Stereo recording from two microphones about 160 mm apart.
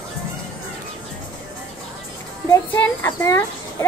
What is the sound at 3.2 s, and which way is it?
Speech, 15° left (ahead or behind).